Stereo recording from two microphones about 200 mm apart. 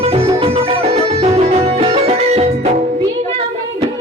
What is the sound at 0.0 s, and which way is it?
Music, 30° right (ahead or behind).